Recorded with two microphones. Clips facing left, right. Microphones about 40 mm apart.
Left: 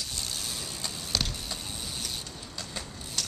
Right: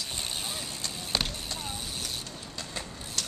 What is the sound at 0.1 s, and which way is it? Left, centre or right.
Vehicle, right.